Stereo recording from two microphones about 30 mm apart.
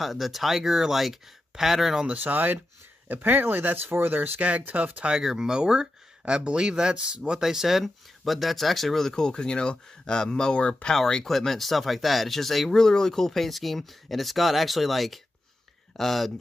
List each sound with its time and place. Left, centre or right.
0.0 s speech: centre
2.1 s speech: right
5.1 s speech: centre
6.2 s speech: right; by 7.8 s centre
7.8 s speech: centre
9.1 s speech: left
10.5 s speech: left
11.2 s speech: centre
12.7 s speech: centre